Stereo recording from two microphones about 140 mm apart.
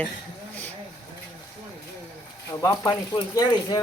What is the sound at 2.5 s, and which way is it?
Speech, 20° left (ahead or behind).